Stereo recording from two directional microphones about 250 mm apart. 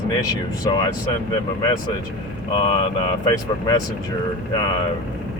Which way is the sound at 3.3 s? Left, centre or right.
Centre.